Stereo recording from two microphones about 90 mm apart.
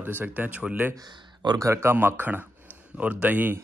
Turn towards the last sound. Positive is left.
turn(degrees=-20)  # may be behind; listen again after turning